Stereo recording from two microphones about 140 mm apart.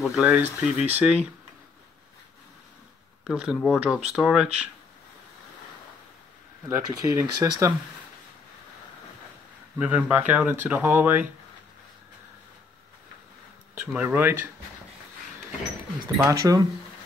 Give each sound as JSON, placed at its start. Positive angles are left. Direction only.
{"t": 0.0, "sound": "speech", "side_deg": 0}
{"t": 3.3, "sound": "speech", "side_deg": -5}
{"t": 6.7, "sound": "speech", "side_deg": -20}
{"t": 9.8, "sound": "speech", "side_deg": -10}
{"t": 13.7, "sound": "speech", "side_deg": -15}
{"t": 16.2, "sound": "speech", "side_deg": -25}